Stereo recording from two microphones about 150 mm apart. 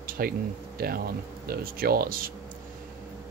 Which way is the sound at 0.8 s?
90° right.